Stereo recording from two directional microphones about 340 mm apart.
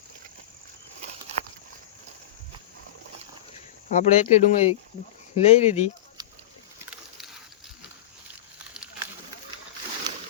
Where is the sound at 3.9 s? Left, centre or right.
Centre.